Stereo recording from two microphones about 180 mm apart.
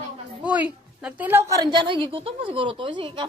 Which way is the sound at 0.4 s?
5° right (ahead or behind).